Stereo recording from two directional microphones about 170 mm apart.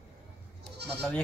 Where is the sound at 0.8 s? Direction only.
80° right.